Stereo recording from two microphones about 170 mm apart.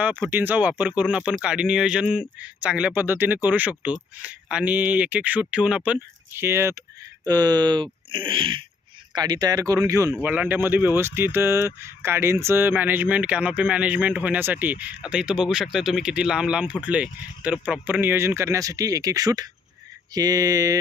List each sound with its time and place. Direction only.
0.0 s speech: 10° right (ahead or behind)